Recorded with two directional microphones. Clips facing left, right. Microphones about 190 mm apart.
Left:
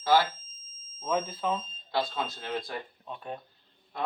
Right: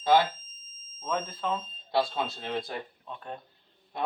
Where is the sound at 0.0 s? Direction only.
20° right (ahead or behind).